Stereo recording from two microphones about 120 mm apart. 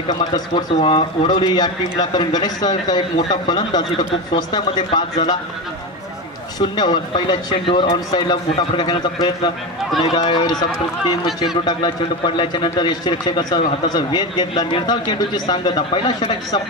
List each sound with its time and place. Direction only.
0.1 s a man's voice: 35° left (ahead or behind)
0.7 s a man's voice: 50° left (ahead or behind)
6.6 s a man's voice: 35° left (ahead or behind)
12.4 s a man's voice: 40° left (ahead or behind)